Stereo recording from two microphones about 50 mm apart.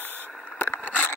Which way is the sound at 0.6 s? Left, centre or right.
Left.